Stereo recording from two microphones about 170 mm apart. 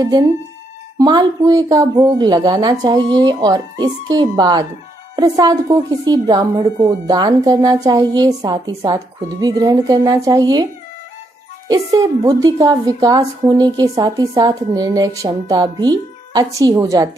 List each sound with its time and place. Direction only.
0.9 s a woman's voice: 20° right (ahead or behind)